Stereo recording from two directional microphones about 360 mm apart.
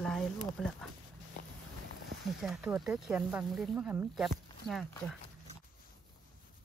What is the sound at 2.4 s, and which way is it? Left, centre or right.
Speech, centre.